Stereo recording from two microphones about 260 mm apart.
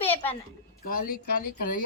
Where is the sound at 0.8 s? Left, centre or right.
Left.